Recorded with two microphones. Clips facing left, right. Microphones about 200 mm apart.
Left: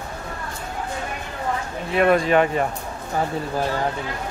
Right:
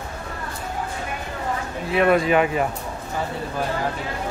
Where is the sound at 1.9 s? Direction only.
Centre (ahead or behind).